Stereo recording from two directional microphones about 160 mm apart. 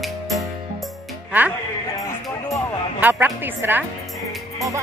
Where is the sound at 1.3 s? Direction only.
10° right (ahead or behind).